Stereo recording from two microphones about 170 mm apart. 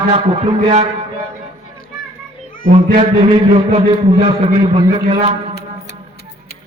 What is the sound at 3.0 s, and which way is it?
A man's voice, 35° right (ahead or behind).